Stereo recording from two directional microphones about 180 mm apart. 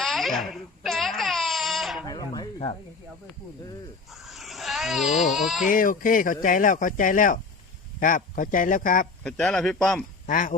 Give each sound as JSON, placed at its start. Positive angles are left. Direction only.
{"t": 0.0, "sound": "babbling", "side_deg": 0}
{"t": 2.0, "sound": "a sound", "side_deg": 25}
{"t": 4.1, "sound": "speech", "side_deg": 0}
{"t": 5.7, "sound": "speech", "side_deg": 50}
{"t": 9.2, "sound": "speech", "side_deg": 0}
{"t": 10.2, "sound": "speech", "side_deg": 45}